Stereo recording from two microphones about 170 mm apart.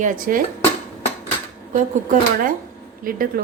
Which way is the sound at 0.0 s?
50° right (ahead or behind).